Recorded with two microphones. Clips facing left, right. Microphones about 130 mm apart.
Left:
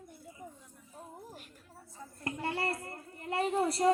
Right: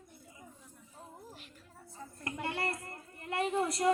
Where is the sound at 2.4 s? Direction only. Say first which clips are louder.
Left 2 dB; 30° left (ahead or behind).